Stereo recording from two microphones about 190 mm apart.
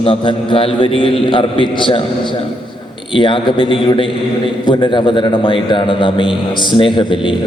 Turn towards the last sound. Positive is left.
turn(degrees=25)  # may be behind; listen again after turning